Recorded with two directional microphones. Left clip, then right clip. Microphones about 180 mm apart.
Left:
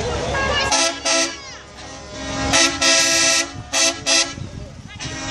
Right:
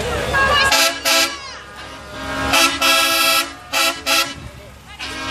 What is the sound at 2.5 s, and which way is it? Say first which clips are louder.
Vehicle: right 2 dB; 5° left (ahead or behind).